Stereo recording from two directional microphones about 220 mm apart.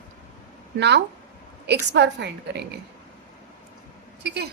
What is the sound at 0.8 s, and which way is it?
A woman's voice, 50° right (ahead or behind).